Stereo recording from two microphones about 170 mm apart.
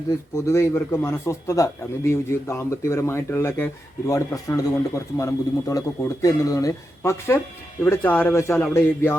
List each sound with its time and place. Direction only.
0.3 s a man's voice: 15° left (ahead or behind)